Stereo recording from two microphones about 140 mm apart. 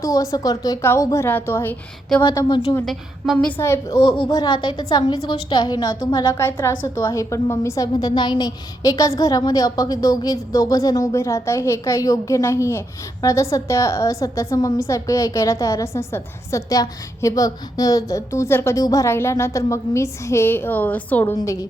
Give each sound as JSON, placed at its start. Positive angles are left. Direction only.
{"t": 0.0, "sound": "a woman's voice", "side_deg": 25}
{"t": 2.2, "sound": "a woman's voice", "side_deg": 30}
{"t": 2.8, "sound": "a woman's voice", "side_deg": 0}
{"t": 3.3, "sound": "a woman's voice", "side_deg": 15}
{"t": 8.0, "sound": "a woman's voice", "side_deg": 30}
{"t": 21.3, "sound": "a woman's voice", "side_deg": 25}